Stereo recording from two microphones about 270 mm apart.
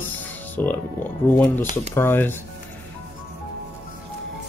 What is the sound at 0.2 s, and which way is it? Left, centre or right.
Speech, centre.